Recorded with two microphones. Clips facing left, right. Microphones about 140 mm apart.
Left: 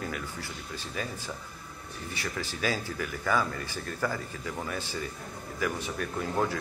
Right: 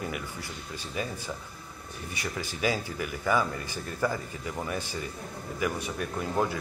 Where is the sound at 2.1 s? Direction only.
15° right (ahead or behind).